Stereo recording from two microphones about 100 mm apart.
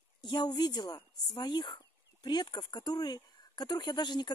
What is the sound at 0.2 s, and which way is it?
Speech, 45° left (ahead or behind).